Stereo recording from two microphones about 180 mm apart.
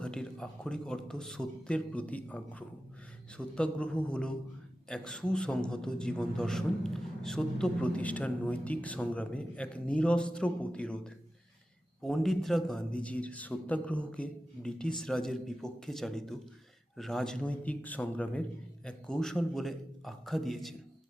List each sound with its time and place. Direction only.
0.0 s a man's voice: 5° left (ahead or behind)